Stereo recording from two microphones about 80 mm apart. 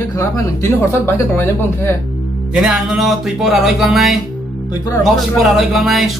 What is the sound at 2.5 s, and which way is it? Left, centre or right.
Speech, centre.